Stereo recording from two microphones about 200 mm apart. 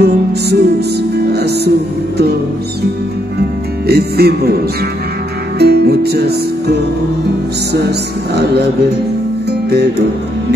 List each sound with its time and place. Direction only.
0.0 s music: 55° right (ahead or behind)
1.3 s speech: 55° right (ahead or behind)
3.8 s music: 55° right (ahead or behind)
5.6 s music: 55° right (ahead or behind)
9.5 s music: 55° right (ahead or behind)